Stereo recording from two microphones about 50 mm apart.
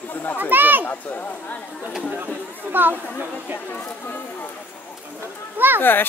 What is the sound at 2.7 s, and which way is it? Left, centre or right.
Speech, right.